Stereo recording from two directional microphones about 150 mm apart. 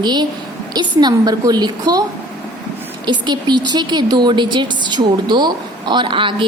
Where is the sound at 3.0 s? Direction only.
30° right (ahead or behind).